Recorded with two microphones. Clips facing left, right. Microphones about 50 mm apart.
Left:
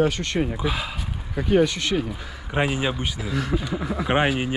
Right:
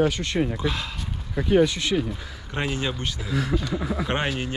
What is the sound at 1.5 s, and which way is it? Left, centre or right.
Speech, left.